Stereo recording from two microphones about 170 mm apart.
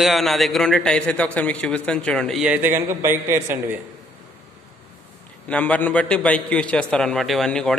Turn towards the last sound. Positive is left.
turn(degrees=5)  # may be behind; listen again after turning